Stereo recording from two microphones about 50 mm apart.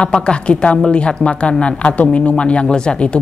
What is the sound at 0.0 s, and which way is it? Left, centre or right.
Speech, centre.